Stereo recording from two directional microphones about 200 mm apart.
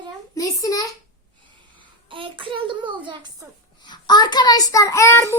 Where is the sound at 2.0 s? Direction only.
25° right (ahead or behind).